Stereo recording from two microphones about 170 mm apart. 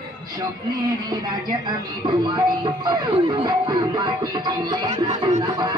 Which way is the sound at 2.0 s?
25° right (ahead or behind).